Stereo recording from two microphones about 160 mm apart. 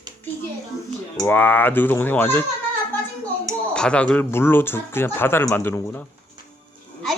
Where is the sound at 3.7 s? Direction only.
5° left (ahead or behind).